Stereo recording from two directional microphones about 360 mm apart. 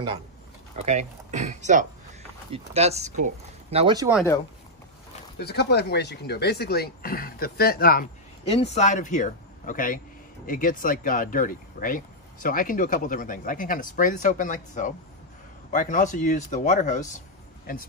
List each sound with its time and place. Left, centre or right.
0.7 s speech: centre
5.4 s speech: left